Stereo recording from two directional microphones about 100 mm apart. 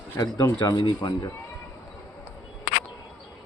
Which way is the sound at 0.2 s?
35° left (ahead or behind).